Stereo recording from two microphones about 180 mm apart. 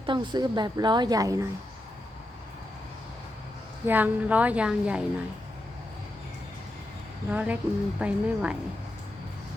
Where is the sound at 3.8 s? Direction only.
10° right (ahead or behind).